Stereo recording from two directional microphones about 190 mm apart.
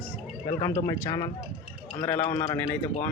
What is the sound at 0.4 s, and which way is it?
Speech, 20° left (ahead or behind).